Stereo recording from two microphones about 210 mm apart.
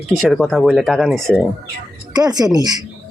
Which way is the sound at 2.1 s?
20° right (ahead or behind).